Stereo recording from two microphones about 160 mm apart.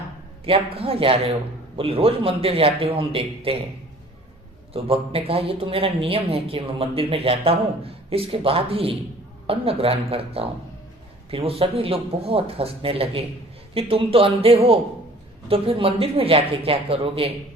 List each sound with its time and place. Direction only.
0.4 s speech: 35° right (ahead or behind)
4.7 s speech: 35° right (ahead or behind)